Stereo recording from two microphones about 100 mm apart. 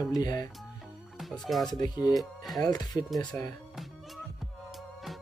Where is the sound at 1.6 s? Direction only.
40° left (ahead or behind).